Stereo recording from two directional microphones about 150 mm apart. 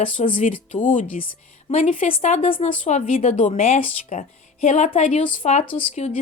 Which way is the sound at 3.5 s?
45° left (ahead or behind).